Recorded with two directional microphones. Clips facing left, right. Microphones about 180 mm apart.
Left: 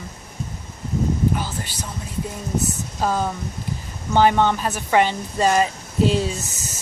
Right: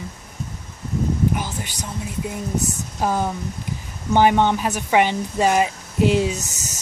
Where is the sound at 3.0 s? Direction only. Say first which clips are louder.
Right 1 dB; 15° right (ahead or behind).